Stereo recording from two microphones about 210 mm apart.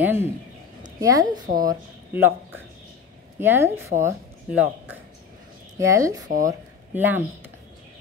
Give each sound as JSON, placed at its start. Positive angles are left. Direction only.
{"t": 0.0, "sound": "a woman's voice", "side_deg": -10}